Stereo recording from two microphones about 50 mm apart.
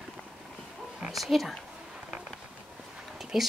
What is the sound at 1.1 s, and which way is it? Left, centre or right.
Speech, centre.